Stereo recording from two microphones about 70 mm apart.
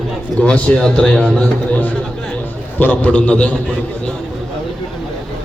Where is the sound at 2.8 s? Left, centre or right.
Left.